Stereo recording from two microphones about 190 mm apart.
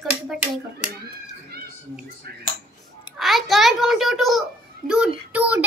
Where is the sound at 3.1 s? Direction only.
Centre (ahead or behind).